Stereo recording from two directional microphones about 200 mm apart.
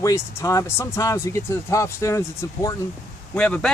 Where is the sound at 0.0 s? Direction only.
15° left (ahead or behind).